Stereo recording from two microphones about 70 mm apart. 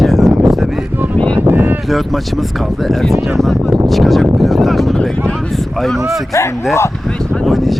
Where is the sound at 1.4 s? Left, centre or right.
Right.